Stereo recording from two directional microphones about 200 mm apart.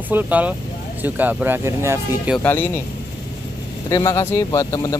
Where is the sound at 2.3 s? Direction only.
10° left (ahead or behind).